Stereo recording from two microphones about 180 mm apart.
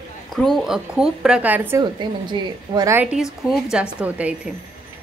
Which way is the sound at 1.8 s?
25° right (ahead or behind).